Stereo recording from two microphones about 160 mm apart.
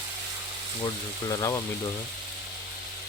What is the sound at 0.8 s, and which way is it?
Speech, 25° left (ahead or behind).